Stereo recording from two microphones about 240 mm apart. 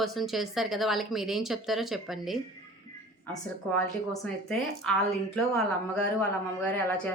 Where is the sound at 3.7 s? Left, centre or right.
Centre.